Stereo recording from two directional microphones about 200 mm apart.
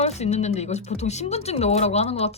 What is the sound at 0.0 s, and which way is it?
Speech, 35° left (ahead or behind).